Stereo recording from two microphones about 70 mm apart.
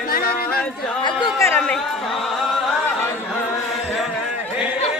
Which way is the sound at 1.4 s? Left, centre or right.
Left.